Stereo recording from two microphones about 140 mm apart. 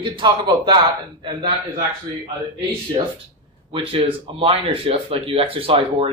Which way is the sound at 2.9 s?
45° right (ahead or behind).